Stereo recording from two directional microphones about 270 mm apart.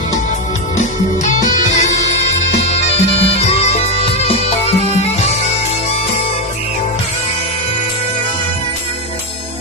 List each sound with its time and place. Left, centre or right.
0.8 s music: left
2.6 s bagpipes: left